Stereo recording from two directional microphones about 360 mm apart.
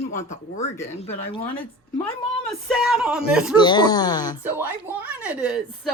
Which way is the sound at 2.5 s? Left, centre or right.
Centre.